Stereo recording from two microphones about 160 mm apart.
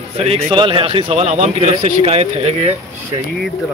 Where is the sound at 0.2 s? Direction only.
35° right (ahead or behind).